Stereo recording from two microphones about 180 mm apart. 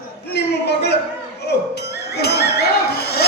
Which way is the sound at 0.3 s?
70° left (ahead or behind).